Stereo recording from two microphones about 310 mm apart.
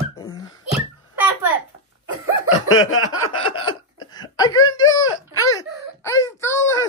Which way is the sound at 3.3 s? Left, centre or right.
Centre.